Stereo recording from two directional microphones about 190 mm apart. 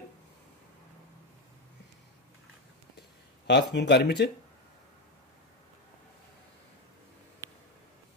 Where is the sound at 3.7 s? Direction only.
60° left (ahead or behind).